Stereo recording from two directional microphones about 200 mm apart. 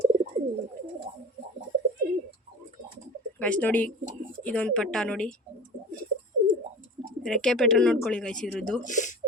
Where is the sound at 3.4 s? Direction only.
5° left (ahead or behind).